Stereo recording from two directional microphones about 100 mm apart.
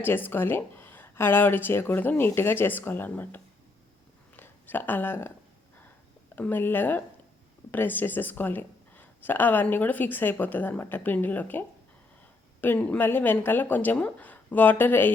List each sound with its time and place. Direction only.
0.0 s speech: 20° left (ahead or behind)
4.4 s a sound: 20° left (ahead or behind)
6.3 s speech: 20° left (ahead or behind)
12.6 s speech: 15° left (ahead or behind)